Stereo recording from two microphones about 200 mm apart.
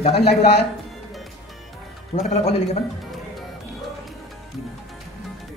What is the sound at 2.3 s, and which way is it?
Speech, 30° left (ahead or behind).